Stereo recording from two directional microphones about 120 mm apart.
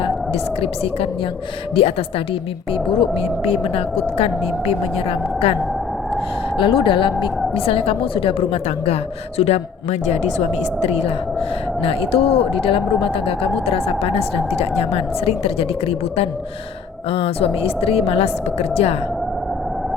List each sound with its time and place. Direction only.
1.7 s speech: 50° left (ahead or behind)
6.6 s speech: 45° left (ahead or behind)
9.4 s speech: 65° left (ahead or behind)